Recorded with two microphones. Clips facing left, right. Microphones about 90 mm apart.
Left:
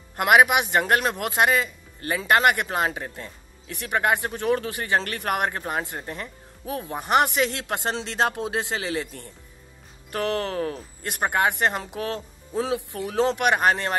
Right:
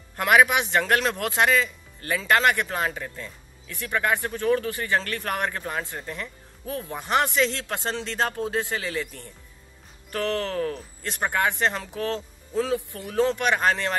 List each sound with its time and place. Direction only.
0.1 s a man's voice: 15° left (ahead or behind)
10.1 s a man's voice: 20° left (ahead or behind)